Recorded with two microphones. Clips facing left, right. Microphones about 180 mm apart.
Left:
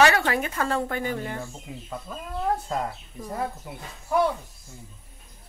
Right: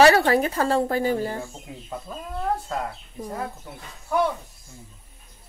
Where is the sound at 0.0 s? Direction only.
35° right (ahead or behind).